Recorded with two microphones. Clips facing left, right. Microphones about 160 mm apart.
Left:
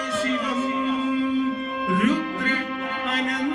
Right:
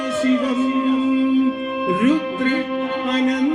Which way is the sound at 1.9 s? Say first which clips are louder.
Right 5 dB; 20° right (ahead or behind).